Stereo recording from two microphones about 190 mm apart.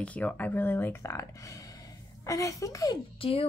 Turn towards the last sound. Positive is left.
turn(degrees=30)  # may be behind; listen again after turning